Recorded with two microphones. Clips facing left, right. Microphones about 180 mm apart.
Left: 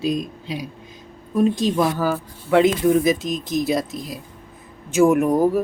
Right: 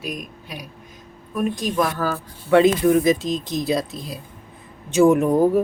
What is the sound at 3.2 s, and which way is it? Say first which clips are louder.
Speech: even; 25° right (ahead or behind).